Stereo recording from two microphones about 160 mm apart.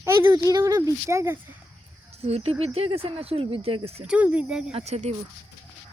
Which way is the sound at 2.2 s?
40° right (ahead or behind).